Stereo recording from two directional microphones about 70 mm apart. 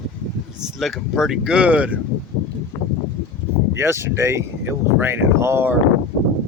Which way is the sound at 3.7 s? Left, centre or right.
Right.